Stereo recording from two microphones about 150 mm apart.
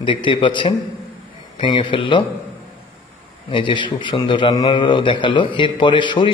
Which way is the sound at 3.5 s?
35° left (ahead or behind).